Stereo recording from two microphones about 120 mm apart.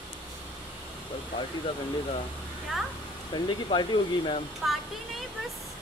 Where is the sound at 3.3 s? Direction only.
40° left (ahead or behind).